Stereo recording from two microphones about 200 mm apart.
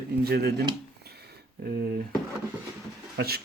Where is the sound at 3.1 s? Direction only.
50° right (ahead or behind).